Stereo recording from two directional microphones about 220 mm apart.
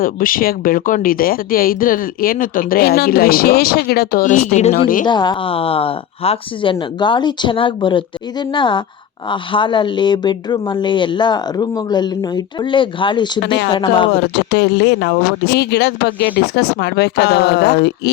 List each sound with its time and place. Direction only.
0.0 s speech: 40° left (ahead or behind)
5.0 s speech: 20° left (ahead or behind)
13.4 s speech: 50° left (ahead or behind)
13.7 s speech: 20° left (ahead or behind)
14.3 s speech: 50° left (ahead or behind)